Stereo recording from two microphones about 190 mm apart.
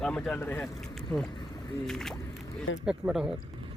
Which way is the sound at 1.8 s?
5° left (ahead or behind).